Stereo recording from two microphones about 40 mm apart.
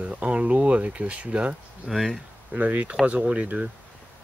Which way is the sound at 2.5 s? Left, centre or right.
Right.